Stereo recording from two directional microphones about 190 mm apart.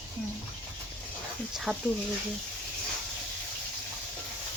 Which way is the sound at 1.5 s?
5° right (ahead or behind).